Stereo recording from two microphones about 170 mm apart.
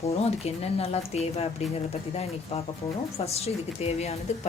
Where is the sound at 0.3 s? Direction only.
40° left (ahead or behind).